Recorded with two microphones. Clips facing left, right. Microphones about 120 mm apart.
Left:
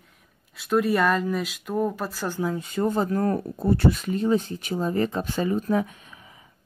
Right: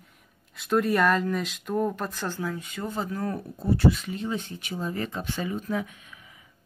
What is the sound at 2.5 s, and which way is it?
Speech, 35° left (ahead or behind).